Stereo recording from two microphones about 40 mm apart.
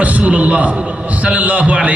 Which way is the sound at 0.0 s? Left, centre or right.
Right.